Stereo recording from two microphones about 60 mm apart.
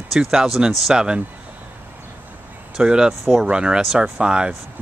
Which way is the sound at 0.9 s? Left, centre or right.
Centre.